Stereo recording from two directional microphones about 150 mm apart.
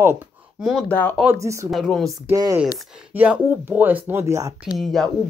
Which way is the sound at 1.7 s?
Centre (ahead or behind).